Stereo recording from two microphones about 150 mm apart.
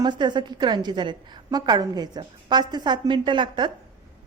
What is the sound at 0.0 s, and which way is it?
A woman's voice, 30° right (ahead or behind).